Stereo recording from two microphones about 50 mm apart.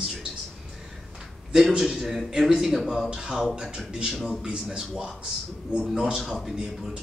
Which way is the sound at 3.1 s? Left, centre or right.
Centre.